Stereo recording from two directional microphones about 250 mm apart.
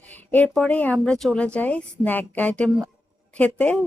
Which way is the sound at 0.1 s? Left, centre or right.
Centre.